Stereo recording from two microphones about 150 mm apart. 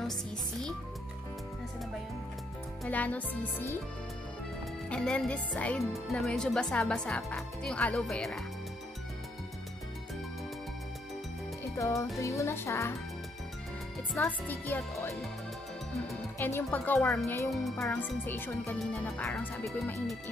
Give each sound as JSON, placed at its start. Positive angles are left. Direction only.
{"t": 0.0, "sound": "speech", "side_deg": 0}
{"t": 2.8, "sound": "a child's voice", "side_deg": 10}
{"t": 4.8, "sound": "speech", "side_deg": 5}
{"t": 11.7, "sound": "music", "side_deg": 20}
{"t": 12.2, "sound": "speech", "side_deg": 20}
{"t": 14.1, "sound": "a child's voice", "side_deg": 10}
{"t": 16.3, "sound": "a child's voice", "side_deg": 15}
{"t": 17.5, "sound": "a child's voice", "side_deg": 0}
{"t": 18.8, "sound": "speech", "side_deg": 0}